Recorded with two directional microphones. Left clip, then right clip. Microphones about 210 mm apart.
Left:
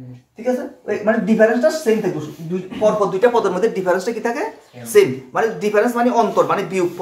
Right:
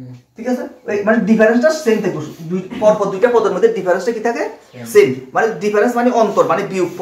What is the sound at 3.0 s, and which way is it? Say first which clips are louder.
Speech: right 2 dB; 30° left (ahead or behind).